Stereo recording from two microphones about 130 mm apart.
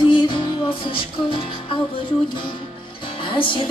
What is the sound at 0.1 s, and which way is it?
Music, 35° left (ahead or behind).